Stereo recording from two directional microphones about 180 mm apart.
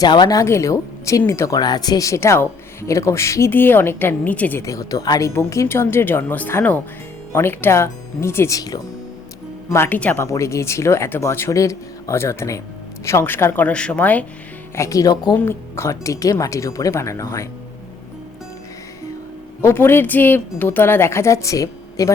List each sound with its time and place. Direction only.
0.0 s a woman's voice: 20° left (ahead or behind)
19.6 s speech: 10° left (ahead or behind)